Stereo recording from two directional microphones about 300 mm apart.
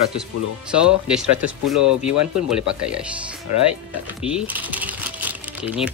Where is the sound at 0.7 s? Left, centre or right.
Centre.